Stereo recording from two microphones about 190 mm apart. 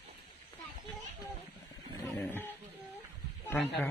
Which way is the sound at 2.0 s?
10° left (ahead or behind).